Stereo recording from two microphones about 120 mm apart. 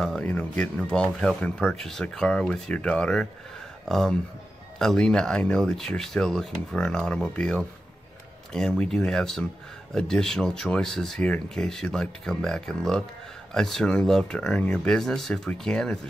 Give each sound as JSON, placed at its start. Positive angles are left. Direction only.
{"t": 0.0, "sound": "speech", "side_deg": 5}